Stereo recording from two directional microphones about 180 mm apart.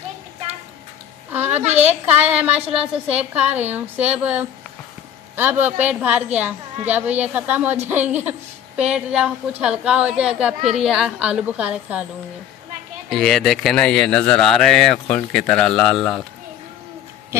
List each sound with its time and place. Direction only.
1.3 s a sound: 10° right (ahead or behind)
1.6 s a woman's voice: 40° right (ahead or behind)
1.9 s a woman's voice: 10° right (ahead or behind)
10.6 s a woman's voice: 35° right (ahead or behind)
10.9 s speech: 5° right (ahead or behind)
13.1 s speech: centre (ahead or behind)